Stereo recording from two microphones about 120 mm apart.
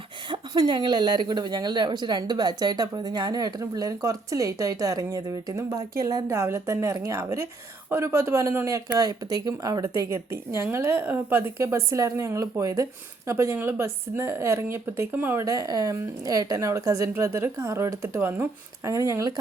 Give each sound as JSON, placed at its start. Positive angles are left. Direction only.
{"t": 0.3, "sound": "speech", "side_deg": -35}
{"t": 15.4, "sound": "speech", "side_deg": -30}